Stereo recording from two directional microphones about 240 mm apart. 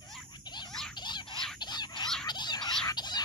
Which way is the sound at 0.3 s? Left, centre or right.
Centre.